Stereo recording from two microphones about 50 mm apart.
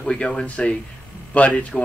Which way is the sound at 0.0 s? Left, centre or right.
Centre.